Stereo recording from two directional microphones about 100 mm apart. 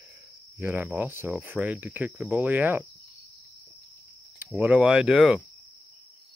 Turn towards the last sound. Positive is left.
turn(degrees=-5)  # may be behind; listen again after turning